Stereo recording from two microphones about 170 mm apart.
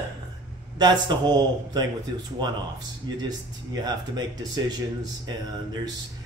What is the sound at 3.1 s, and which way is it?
Speech, 25° right (ahead or behind).